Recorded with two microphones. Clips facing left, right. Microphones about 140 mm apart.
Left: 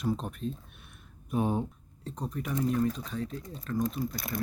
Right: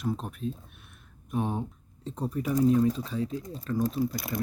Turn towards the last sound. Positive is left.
turn(degrees=-10)  # may be behind; listen again after turning